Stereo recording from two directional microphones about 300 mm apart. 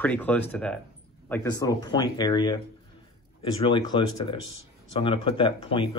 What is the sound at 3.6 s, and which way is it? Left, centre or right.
Speech, centre.